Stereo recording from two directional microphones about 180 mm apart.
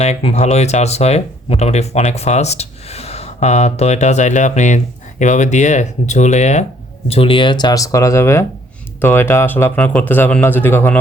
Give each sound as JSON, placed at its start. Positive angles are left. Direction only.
{"t": 0.0, "sound": "speech", "side_deg": 30}